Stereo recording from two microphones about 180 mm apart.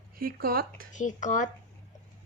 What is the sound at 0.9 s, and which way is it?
Speech, 45° left (ahead or behind).